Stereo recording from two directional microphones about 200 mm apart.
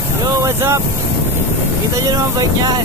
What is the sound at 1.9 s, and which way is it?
Speech, 15° right (ahead or behind).